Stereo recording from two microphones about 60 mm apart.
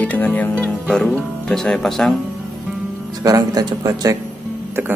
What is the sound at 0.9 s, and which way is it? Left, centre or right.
Speech, centre.